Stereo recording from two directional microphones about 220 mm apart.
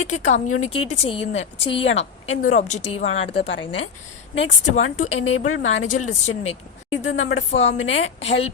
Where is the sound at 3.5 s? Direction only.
55° left (ahead or behind).